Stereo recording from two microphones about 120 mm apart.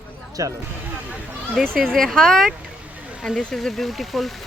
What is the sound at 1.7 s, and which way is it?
Speech, 5° left (ahead or behind).